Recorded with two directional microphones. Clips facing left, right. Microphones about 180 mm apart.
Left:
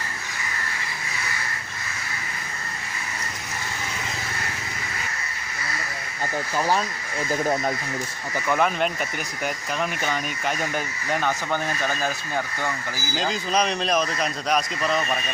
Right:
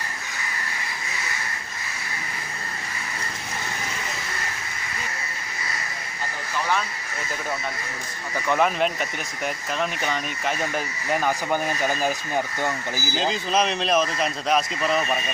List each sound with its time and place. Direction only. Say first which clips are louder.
6.6 s speech: left 2 dB; 35° left (ahead or behind)
8.4 s speech: right 1 dB; centre (ahead or behind)
13.1 s speech: right 1 dB; centre (ahead or behind)